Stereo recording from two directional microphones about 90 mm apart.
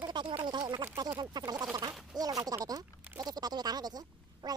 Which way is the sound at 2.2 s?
45° right (ahead or behind).